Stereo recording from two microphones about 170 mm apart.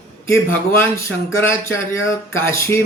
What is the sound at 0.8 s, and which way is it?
Speech, 15° left (ahead or behind).